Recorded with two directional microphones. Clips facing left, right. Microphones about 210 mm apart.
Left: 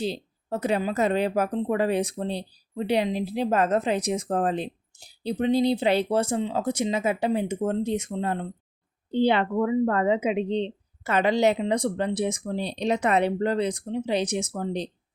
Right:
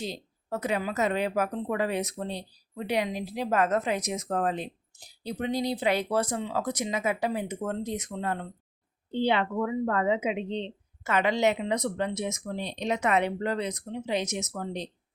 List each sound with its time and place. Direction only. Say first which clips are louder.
0.0 s speech: left 6 dB; 30° left (ahead or behind)
9.0 s a woman's voice: left 4 dB; 40° left (ahead or behind)